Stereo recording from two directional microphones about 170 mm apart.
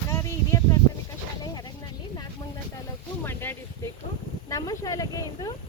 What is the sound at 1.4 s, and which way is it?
Vehicle, 25° left (ahead or behind).